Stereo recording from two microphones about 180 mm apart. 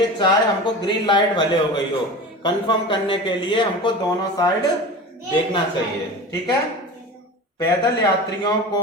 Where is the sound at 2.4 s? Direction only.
25° left (ahead or behind).